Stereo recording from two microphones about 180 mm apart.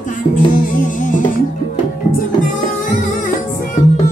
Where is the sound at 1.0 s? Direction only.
45° left (ahead or behind).